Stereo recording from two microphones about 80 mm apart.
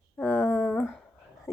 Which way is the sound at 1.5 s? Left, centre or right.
Left.